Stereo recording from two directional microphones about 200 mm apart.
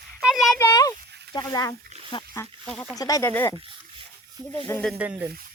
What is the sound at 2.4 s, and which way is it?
Speech, 5° left (ahead or behind).